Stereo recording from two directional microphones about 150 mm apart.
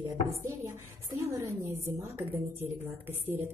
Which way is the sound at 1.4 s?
20° right (ahead or behind).